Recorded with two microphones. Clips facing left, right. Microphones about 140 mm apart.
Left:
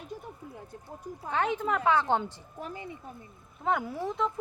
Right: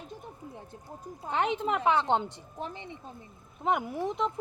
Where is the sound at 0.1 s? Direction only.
25° right (ahead or behind).